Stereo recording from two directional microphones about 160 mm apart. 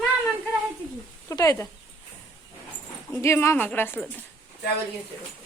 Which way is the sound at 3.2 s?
15° left (ahead or behind).